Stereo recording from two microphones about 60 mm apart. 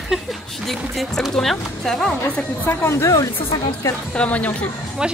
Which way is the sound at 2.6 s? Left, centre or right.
Left.